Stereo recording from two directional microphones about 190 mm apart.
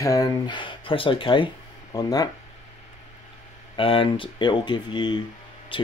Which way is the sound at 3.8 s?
30° left (ahead or behind).